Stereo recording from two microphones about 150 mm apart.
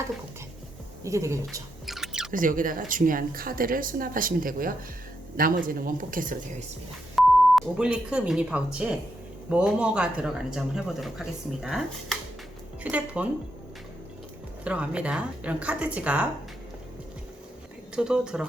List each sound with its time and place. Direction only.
1.0 s speech: 20° right (ahead or behind)
1.9 s a sound: 5° right (ahead or behind)
2.3 s speech: 65° right (ahead or behind)
7.2 s a woman's voice: 5° right (ahead or behind)
14.6 s a woman's voice: 10° right (ahead or behind)
17.9 s speech: 5° right (ahead or behind)